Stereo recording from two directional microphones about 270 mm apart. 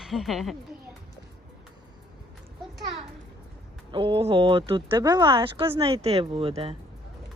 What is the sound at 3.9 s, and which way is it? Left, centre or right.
Speech, centre.